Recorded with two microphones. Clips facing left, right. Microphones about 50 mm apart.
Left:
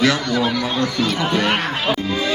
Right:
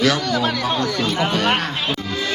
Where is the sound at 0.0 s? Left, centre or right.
Left.